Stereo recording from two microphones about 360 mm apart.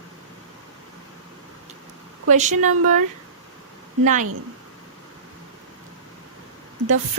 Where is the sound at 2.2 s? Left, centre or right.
Centre.